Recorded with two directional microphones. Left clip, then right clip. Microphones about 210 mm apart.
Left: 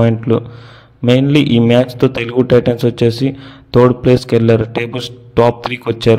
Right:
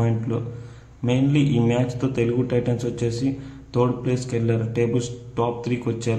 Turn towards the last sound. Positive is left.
turn(degrees=40)  # may be behind; listen again after turning